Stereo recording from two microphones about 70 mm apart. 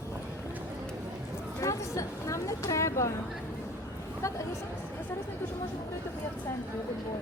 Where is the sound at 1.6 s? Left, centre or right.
Left.